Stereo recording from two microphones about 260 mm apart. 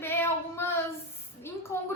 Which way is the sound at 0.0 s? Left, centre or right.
Centre.